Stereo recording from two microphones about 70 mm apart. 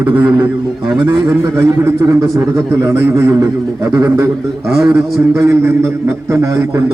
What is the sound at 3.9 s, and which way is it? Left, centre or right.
Speech, right.